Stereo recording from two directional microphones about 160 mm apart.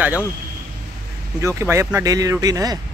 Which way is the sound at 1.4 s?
20° right (ahead or behind).